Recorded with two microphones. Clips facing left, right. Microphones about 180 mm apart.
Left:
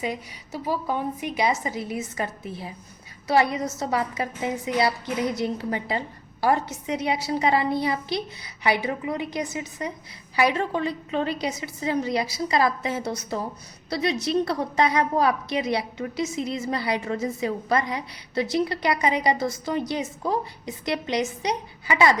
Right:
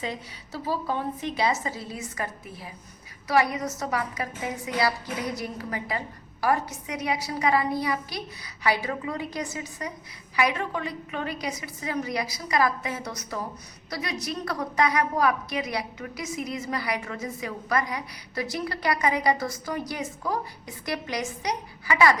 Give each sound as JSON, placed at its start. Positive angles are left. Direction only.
{"t": 0.0, "sound": "a woman's voice", "side_deg": 15}